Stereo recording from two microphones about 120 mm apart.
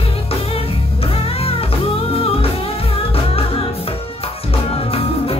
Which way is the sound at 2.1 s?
50° left (ahead or behind).